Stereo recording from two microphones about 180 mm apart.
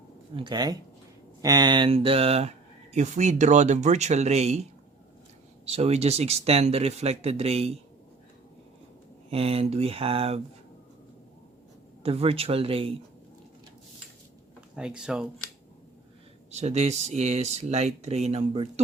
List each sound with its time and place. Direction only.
0.3 s speech: 25° right (ahead or behind)
5.6 s speech: 35° right (ahead or behind)
9.3 s speech: 35° right (ahead or behind)
12.0 s speech: 35° right (ahead or behind)
14.8 s speech: 5° right (ahead or behind)
16.5 s speech: 35° right (ahead or behind)